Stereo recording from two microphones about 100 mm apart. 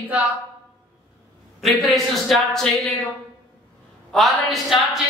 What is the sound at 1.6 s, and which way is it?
A woman's voice, centre (ahead or behind).